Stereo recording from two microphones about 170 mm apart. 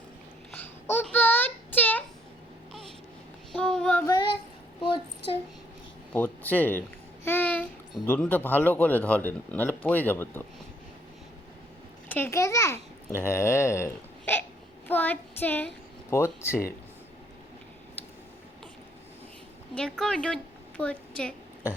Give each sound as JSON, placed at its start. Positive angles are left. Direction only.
{"t": 0.5, "sound": "a sound", "side_deg": 10}
{"t": 3.5, "sound": "child singing", "side_deg": 5}
{"t": 4.0, "sound": "child singing", "side_deg": 25}
{"t": 4.8, "sound": "a sound", "side_deg": 30}
{"t": 6.1, "sound": "speech", "side_deg": 10}
{"t": 7.3, "sound": "a sound", "side_deg": 10}
{"t": 8.0, "sound": "speech", "side_deg": 10}
{"t": 12.0, "sound": "a child's voice", "side_deg": 10}
{"t": 19.7, "sound": "a woman's voice", "side_deg": 5}